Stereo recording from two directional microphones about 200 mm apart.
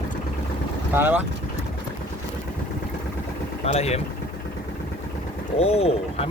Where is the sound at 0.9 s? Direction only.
10° right (ahead or behind).